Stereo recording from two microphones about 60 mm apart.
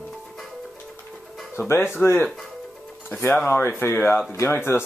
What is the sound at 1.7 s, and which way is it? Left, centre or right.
Speech, left.